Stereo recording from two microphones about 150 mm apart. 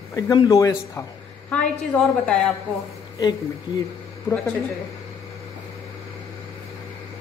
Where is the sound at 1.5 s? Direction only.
5° left (ahead or behind).